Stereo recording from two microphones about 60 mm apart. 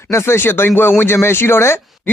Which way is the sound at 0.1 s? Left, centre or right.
Left.